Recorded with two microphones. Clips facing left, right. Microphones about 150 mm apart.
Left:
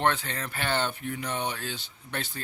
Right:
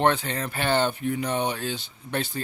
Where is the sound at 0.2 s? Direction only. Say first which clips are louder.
Right 5 dB; 20° right (ahead or behind).